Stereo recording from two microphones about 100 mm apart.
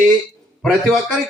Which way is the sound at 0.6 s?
Centre (ahead or behind).